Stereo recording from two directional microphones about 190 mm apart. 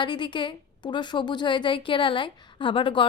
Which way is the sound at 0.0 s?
25° left (ahead or behind).